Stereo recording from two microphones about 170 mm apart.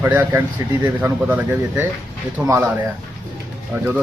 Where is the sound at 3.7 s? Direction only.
5° right (ahead or behind).